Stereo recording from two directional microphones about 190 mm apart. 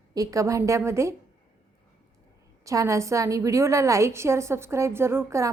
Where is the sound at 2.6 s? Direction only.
15° right (ahead or behind).